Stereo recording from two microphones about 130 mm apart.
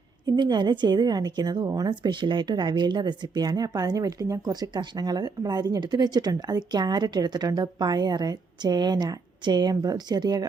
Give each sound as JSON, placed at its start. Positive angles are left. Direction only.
{"t": 0.3, "sound": "a woman's voice", "side_deg": -35}